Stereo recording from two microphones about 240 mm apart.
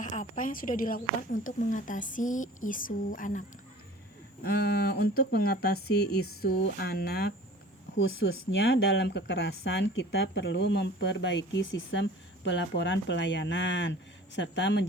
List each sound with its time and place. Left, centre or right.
0.0 s a woman's voice: left
4.4 s a woman's voice: left
7.9 s speech: left